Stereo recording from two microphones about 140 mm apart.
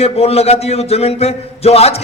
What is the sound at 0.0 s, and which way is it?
A man's voice, 45° left (ahead or behind).